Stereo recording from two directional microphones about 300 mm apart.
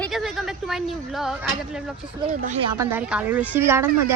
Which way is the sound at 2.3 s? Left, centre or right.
Right.